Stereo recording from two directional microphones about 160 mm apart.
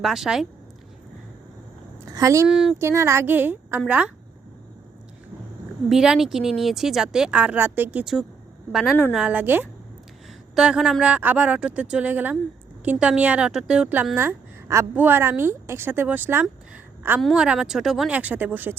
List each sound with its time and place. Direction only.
0.0 s speech: centre (ahead or behind)
2.0 s a woman's voice: 20° right (ahead or behind)
2.5 s speech: 5° right (ahead or behind)
2.7 s a woman's voice: 15° right (ahead or behind)
5.9 s a woman's voice: 5° right (ahead or behind)
17.2 s speech: centre (ahead or behind)